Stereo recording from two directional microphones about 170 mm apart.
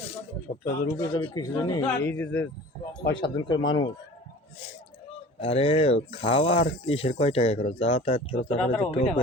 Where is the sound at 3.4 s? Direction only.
25° left (ahead or behind).